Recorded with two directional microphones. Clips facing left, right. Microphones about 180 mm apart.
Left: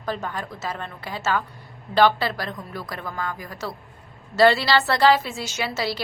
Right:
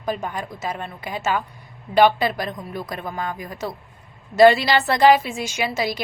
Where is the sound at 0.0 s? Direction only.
15° right (ahead or behind).